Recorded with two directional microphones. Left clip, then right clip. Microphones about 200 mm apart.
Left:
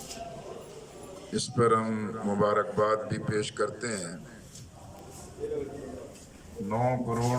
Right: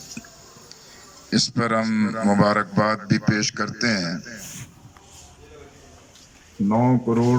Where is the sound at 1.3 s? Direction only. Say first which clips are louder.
Right 3 dB; 40° right (ahead or behind).